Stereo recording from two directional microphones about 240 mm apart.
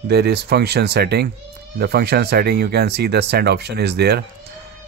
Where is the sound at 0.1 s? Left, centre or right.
Right.